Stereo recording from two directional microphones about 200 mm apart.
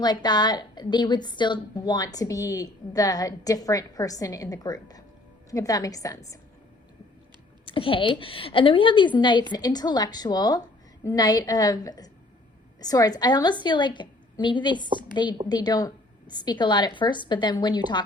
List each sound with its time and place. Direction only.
0.0 s a woman's voice: 20° left (ahead or behind)
7.6 s a woman's voice: 25° left (ahead or behind)